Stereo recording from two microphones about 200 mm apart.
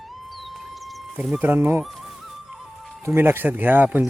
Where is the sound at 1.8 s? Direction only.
Centre (ahead or behind).